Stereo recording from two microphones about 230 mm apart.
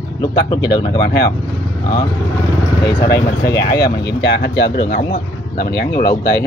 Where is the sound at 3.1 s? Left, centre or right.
Left.